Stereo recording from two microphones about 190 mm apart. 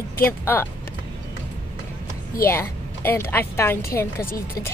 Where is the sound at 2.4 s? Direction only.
15° left (ahead or behind).